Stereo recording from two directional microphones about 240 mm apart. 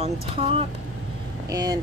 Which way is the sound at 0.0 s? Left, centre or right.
Right.